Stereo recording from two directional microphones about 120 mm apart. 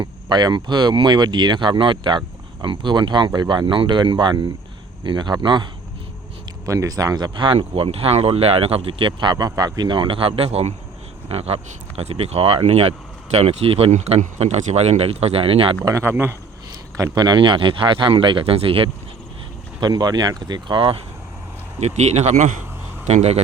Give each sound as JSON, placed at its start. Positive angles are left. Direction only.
{"t": 0.0, "sound": "speech", "side_deg": -35}
{"t": 6.7, "sound": "speech", "side_deg": -30}
{"t": 9.3, "sound": "speech", "side_deg": -30}
{"t": 13.9, "sound": "speech", "side_deg": -75}
{"t": 15.8, "sound": "speech", "side_deg": -25}
{"t": 19.8, "sound": "speech", "side_deg": -35}
{"t": 21.8, "sound": "a man's voice", "side_deg": -70}
{"t": 23.0, "sound": "a man's voice", "side_deg": -65}